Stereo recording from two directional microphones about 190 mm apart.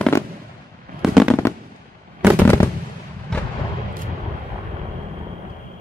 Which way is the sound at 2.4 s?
10° left (ahead or behind).